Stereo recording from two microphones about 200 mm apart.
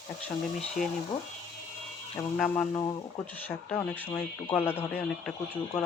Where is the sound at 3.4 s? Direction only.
10° left (ahead or behind).